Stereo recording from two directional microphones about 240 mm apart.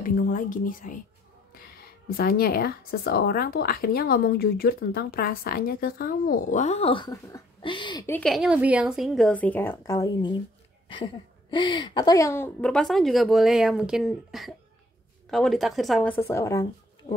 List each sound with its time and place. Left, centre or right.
0.0 s speech: left
2.0 s speech: left; by 8.0 s centre
8.1 s a woman's voice: centre
11.5 s a woman's voice: centre